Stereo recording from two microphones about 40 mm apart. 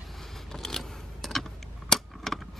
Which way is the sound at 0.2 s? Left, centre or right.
Centre.